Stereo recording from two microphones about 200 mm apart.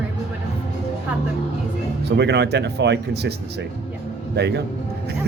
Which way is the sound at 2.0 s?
60° right (ahead or behind).